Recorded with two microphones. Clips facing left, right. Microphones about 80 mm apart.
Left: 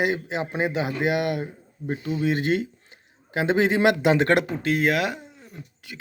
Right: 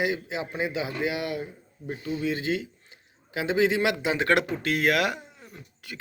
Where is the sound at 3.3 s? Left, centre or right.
Left.